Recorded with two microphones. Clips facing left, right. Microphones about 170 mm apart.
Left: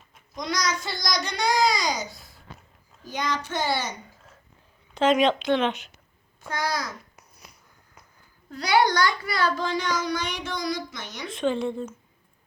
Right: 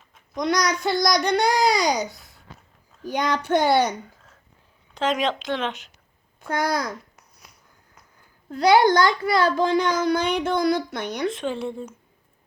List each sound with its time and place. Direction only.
0.3 s a child's voice: 60° right (ahead or behind)
4.9 s speech: centre (ahead or behind)
6.5 s a child's voice: 55° right (ahead or behind)
7.2 s finger snapping: centre (ahead or behind)
8.4 s a child's voice: 50° right (ahead or behind)
11.3 s speech: 5° right (ahead or behind)